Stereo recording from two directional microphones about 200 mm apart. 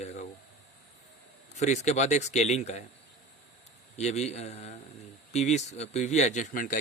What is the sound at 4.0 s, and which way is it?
Speech, 35° left (ahead or behind).